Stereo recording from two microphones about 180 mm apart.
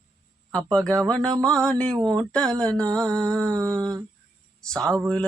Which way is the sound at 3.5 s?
15° right (ahead or behind).